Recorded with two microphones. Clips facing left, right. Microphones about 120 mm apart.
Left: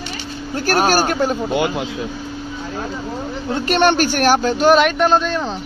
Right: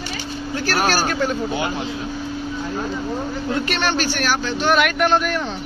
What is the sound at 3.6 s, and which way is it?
Speech, 50° left (ahead or behind).